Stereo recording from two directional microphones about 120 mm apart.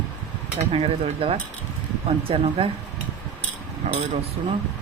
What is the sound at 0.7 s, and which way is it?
Speech, 55° right (ahead or behind).